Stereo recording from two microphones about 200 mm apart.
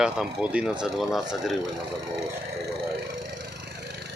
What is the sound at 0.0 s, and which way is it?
Speech, 5° right (ahead or behind).